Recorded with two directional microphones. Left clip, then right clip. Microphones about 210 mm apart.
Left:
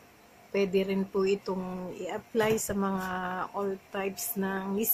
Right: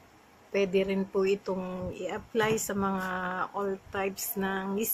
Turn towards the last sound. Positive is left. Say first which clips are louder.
# right 1 dB
turn(degrees=5)  # may be behind; listen again after turning